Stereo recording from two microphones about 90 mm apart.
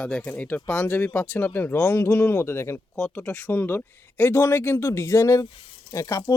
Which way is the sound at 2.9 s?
15° left (ahead or behind).